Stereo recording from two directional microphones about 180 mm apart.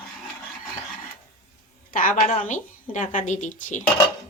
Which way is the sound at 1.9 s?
50° left (ahead or behind).